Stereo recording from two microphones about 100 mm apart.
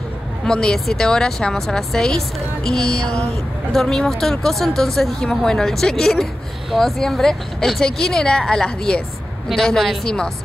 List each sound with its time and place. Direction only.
0.5 s a woman's voice: 5° left (ahead or behind)